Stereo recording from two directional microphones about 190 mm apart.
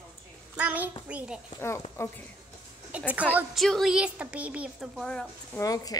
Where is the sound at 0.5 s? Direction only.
10° right (ahead or behind).